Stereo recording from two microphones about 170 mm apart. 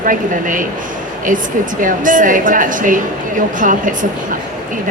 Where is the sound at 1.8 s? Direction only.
50° right (ahead or behind).